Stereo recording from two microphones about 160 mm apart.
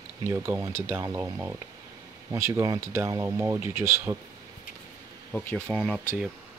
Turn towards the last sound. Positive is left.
turn(degrees=0)  # may be behind; listen again after turning